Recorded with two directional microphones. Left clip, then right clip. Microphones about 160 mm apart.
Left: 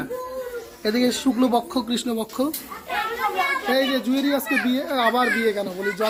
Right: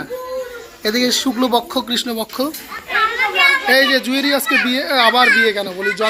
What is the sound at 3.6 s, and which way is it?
Speech, centre (ahead or behind).